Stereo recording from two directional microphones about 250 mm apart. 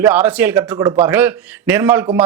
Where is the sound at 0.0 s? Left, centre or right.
Centre.